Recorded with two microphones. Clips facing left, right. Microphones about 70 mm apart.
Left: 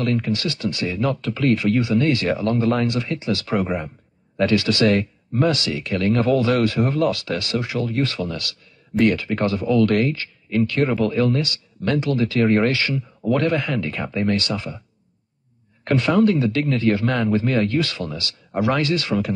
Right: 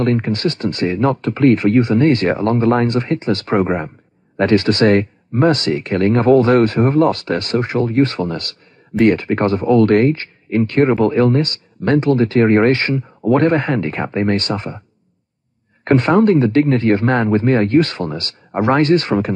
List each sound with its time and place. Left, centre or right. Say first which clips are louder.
0.0 s speech: right 5 dB; right
15.8 s speech: right 5 dB; right